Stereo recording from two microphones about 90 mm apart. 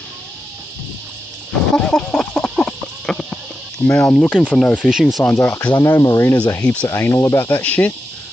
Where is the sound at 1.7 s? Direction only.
10° left (ahead or behind).